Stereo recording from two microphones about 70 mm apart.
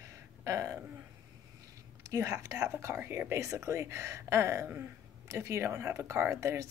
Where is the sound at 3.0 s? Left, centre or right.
Right.